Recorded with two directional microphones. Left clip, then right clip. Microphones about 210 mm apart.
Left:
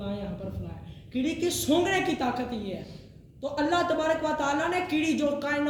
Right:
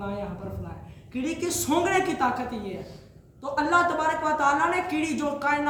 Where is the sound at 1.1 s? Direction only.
20° right (ahead or behind).